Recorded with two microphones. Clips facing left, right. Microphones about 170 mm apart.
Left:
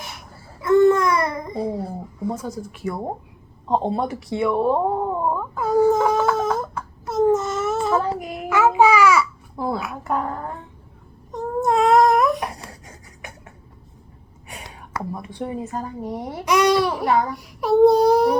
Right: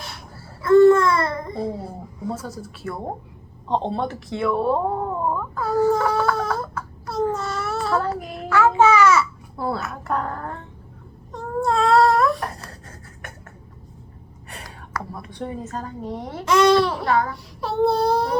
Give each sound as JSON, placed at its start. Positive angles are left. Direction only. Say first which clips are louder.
{"t": 0.6, "sound": "babbling", "louder": "right 2 dB", "side_deg": 20}
{"t": 2.2, "sound": "speech", "louder": "left 2 dB", "side_deg": 15}
{"t": 3.7, "sound": "cat", "louder": "left 2 dB", "side_deg": 5}
{"t": 11.3, "sound": "a sound", "louder": "left 2 dB", "side_deg": 15}
{"t": 14.9, "sound": "a sound", "louder": "left 3 dB", "side_deg": 15}
{"t": 15.4, "sound": "speech", "louder": "left 2 dB", "side_deg": 10}